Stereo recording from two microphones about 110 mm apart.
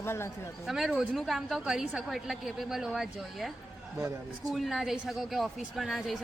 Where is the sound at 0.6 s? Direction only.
Centre (ahead or behind).